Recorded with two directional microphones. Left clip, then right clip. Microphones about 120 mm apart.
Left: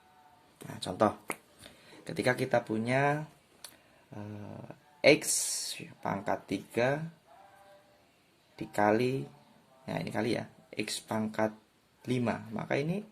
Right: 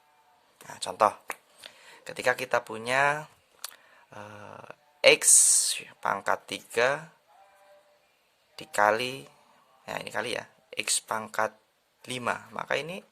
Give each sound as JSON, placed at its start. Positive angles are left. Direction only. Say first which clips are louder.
{"t": 0.6, "sound": "a sound", "louder": "right 5 dB", "side_deg": -45}
{"t": 4.1, "sound": "speech", "louder": "right 3 dB", "side_deg": -90}
{"t": 8.5, "sound": "speech", "louder": "right 4 dB", "side_deg": -75}
{"t": 9.8, "sound": "speech", "louder": "right 2 dB", "side_deg": -60}